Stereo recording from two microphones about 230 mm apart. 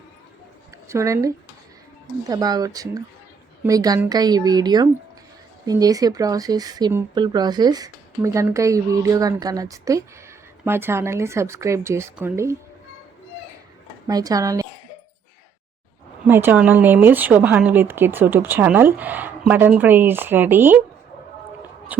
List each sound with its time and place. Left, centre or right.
0.9 s speech: centre
14.1 s speech: centre
16.2 s speech: centre